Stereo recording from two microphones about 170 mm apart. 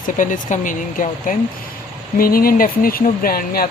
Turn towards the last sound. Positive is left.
turn(degrees=60)  # may be behind; listen again after turning